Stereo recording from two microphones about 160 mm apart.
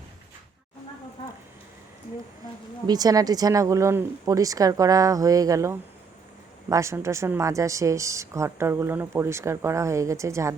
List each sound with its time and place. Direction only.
2.8 s speech: 25° right (ahead or behind)